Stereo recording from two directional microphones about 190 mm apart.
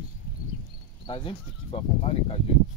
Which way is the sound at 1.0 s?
25° left (ahead or behind).